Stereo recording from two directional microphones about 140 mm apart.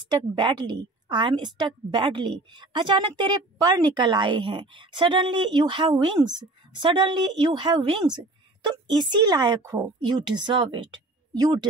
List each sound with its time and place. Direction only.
0.4 s a woman's voice: 35° right (ahead or behind)